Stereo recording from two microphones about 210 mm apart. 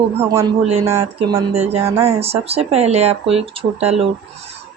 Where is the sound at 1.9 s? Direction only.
15° right (ahead or behind).